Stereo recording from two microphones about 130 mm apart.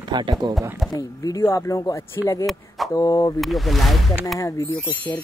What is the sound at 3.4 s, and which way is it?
Speech, centre (ahead or behind).